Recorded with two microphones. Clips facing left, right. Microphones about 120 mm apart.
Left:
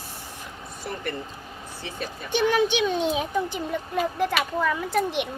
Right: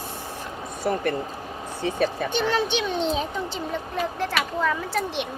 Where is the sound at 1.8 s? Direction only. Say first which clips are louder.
Right 11 dB; 60° right (ahead or behind).